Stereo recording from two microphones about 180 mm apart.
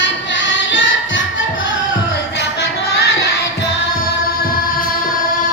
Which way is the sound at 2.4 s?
70° left (ahead or behind).